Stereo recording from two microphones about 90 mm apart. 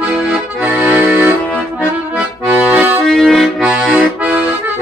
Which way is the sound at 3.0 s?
5° left (ahead or behind).